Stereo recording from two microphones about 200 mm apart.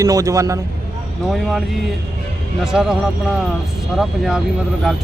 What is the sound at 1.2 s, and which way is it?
Speech, centre (ahead or behind).